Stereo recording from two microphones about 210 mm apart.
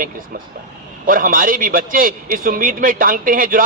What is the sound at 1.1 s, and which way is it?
Speech, 40° right (ahead or behind).